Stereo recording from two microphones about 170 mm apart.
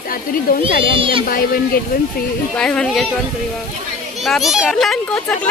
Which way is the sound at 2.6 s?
5° left (ahead or behind).